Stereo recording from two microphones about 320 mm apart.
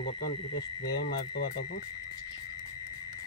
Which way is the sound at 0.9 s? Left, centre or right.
Left.